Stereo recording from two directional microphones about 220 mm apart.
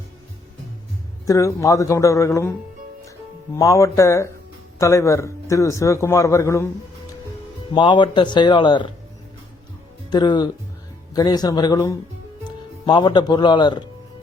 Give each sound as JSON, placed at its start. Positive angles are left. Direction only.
{"t": 1.3, "sound": "a man's voice", "side_deg": 15}
{"t": 3.5, "sound": "a man's voice", "side_deg": 15}
{"t": 7.7, "sound": "speech", "side_deg": 20}
{"t": 10.1, "sound": "a man's voice", "side_deg": 20}